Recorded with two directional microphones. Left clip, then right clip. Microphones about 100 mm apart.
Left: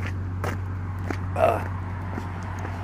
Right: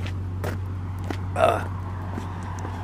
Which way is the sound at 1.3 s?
25° right (ahead or behind).